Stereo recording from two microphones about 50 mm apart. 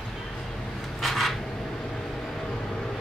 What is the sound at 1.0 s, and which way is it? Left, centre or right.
Filing, centre.